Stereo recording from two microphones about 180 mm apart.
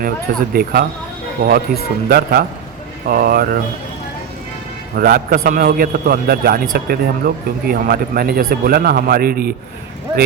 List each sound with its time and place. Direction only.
0.5 s a man's voice: 60° right (ahead or behind)
4.9 s a man's voice: 55° right (ahead or behind)